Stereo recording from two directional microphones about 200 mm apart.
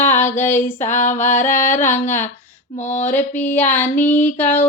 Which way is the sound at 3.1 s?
10° left (ahead or behind).